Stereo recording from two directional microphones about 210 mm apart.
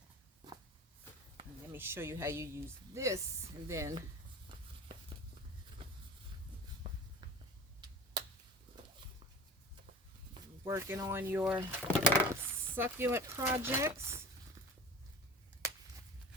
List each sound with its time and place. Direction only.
1.7 s speech: 10° right (ahead or behind)
6.8 s a sound: 25° right (ahead or behind)
10.3 s speech: 15° right (ahead or behind)
12.0 s coin: 10° right (ahead or behind)